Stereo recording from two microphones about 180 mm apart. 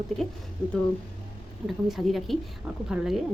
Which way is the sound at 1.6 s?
Centre (ahead or behind).